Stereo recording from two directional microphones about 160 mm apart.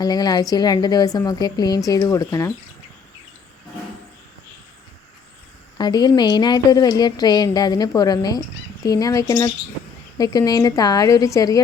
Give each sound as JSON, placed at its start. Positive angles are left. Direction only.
{"t": 0.0, "sound": "a woman's voice", "side_deg": 25}
{"t": 5.7, "sound": "a woman's voice", "side_deg": 25}